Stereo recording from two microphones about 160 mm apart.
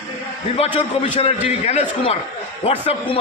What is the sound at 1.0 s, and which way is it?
A man's voice, 40° left (ahead or behind).